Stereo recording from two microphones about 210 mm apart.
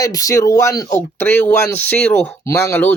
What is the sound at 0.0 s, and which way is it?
Speech, 15° left (ahead or behind).